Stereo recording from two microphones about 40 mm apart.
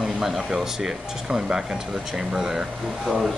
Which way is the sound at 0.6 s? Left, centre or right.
Centre.